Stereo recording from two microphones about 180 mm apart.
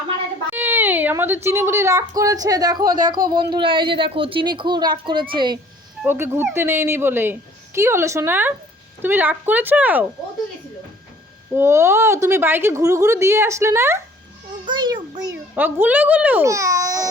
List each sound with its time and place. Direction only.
0.5 s a sound: 10° right (ahead or behind)
1.5 s speech: 15° right (ahead or behind)
6.0 s a woman's voice: 10° right (ahead or behind)
11.5 s a woman's voice: 15° right (ahead or behind)
14.6 s music: 25° right (ahead or behind)
15.5 s a woman's voice: 10° right (ahead or behind)